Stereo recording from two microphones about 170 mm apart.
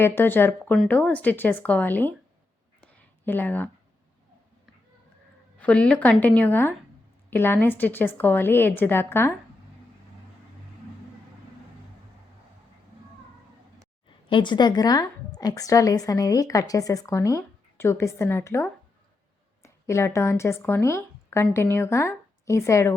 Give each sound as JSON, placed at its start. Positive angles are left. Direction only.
{"t": 0.0, "sound": "a woman's voice", "side_deg": 15}
{"t": 2.8, "sound": "a sound", "side_deg": 10}
{"t": 5.5, "sound": "a woman's voice", "side_deg": 5}
{"t": 14.3, "sound": "a woman's voice", "side_deg": 30}